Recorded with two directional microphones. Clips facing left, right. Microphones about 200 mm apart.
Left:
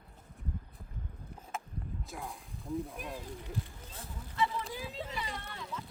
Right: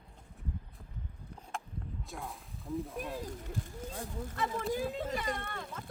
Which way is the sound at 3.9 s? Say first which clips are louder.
Even; 45° right (ahead or behind).